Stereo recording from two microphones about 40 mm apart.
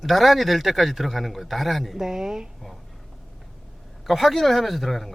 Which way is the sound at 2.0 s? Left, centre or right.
Centre.